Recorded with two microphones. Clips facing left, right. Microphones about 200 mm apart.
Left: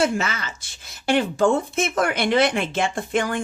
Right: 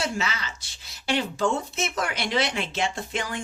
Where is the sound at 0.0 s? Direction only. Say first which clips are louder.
Left 7 dB; 50° left (ahead or behind).